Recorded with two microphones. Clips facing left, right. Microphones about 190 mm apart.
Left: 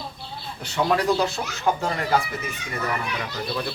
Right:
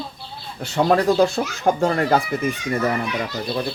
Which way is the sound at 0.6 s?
50° right (ahead or behind).